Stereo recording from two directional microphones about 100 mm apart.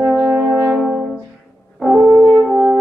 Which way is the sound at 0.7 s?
Centre (ahead or behind).